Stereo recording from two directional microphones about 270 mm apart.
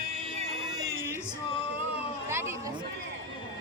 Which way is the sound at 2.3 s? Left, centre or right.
Centre.